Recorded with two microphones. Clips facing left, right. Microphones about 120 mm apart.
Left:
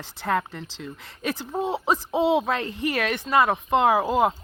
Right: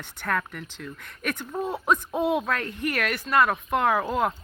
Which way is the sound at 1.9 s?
90° left.